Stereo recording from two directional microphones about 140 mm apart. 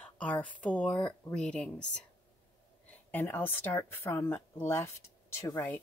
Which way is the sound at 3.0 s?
15° left (ahead or behind).